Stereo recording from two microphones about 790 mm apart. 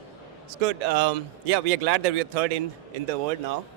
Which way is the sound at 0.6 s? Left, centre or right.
Right.